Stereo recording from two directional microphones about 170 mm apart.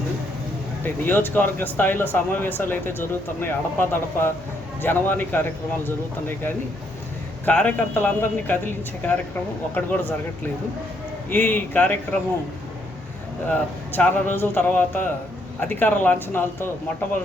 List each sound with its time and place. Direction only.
1.0 s speech: 10° left (ahead or behind)
11.3 s speech: 10° left (ahead or behind)
13.5 s speech: 10° left (ahead or behind)